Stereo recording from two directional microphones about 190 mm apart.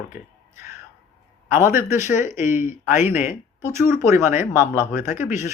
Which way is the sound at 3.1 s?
10° right (ahead or behind).